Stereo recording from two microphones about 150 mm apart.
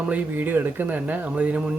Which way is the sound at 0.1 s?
10° right (ahead or behind).